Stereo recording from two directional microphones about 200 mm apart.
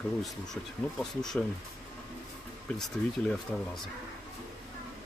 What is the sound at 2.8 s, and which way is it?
Speech, centre (ahead or behind).